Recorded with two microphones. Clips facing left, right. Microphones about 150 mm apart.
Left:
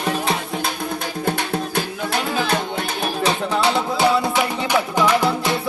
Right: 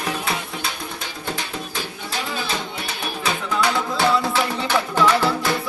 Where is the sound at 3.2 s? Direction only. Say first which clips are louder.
Left 2 dB; 25° left (ahead or behind).